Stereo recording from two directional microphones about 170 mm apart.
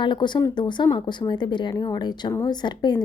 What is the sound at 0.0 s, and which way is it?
Speech, 25° left (ahead or behind).